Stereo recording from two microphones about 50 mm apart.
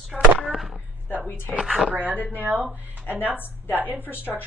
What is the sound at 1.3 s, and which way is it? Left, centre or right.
Speech, left.